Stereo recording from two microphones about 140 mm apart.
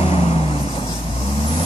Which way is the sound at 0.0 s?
40° left (ahead or behind).